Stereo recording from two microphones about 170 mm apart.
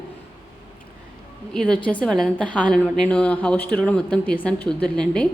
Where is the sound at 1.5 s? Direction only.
5° left (ahead or behind).